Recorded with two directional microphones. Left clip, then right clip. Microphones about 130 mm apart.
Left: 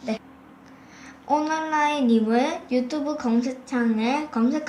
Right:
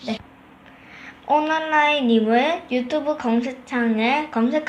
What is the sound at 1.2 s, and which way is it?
A woman's voice, 35° right (ahead or behind).